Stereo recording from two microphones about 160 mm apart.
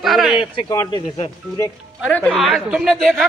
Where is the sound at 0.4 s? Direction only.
35° left (ahead or behind).